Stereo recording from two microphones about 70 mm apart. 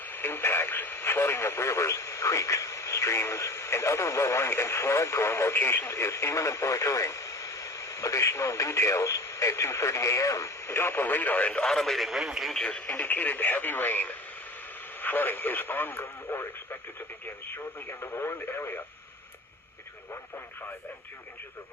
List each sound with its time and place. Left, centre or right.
0.0 s speech: left
5.9 s speech: left
10.8 s speech: left
11.7 s speech: centre
12.9 s speech: left